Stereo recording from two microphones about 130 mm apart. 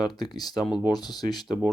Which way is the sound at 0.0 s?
30° left (ahead or behind).